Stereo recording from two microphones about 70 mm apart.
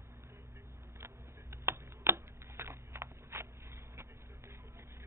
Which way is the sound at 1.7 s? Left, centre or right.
Right.